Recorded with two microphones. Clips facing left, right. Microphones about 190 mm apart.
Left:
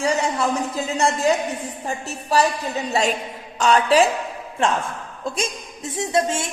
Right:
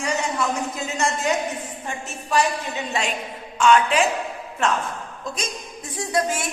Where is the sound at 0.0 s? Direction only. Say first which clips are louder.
Left 3 dB; 30° left (ahead or behind).